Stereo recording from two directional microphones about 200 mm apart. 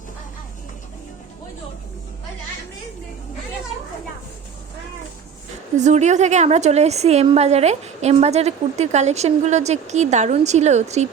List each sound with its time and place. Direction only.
5.7 s a woman's voice: 35° right (ahead or behind)